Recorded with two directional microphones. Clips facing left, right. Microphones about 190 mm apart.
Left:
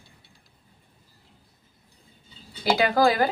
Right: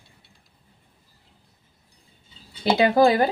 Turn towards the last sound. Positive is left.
turn(degrees=-25)  # may be behind; listen again after turning